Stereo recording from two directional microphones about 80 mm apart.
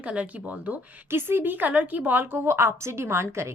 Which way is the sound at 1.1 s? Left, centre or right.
Right.